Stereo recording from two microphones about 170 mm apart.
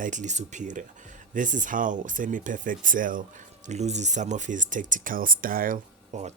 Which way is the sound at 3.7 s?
40° right (ahead or behind).